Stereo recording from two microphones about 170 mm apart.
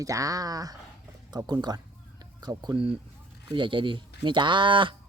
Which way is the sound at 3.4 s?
30° right (ahead or behind).